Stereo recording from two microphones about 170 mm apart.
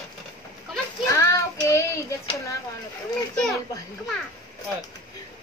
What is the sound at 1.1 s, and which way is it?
Child singing, 15° left (ahead or behind).